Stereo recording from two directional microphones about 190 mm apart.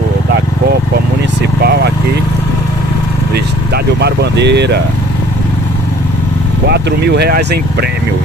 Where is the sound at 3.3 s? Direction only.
60° right (ahead or behind).